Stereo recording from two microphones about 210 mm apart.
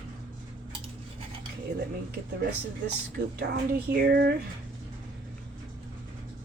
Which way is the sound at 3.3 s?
50° right (ahead or behind).